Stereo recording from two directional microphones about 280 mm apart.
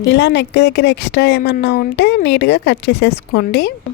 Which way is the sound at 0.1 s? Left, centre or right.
Left.